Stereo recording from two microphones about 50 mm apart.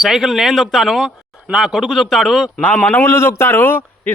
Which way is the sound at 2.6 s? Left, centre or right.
Left.